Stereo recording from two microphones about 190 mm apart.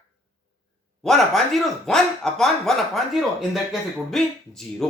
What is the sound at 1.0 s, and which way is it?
A man's voice, centre (ahead or behind).